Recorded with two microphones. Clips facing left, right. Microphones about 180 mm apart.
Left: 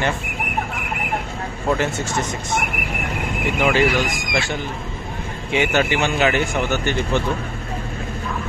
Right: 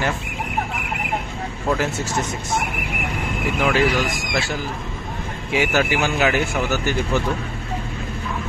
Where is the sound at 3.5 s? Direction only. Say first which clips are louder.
Left 1 dB; centre (ahead or behind).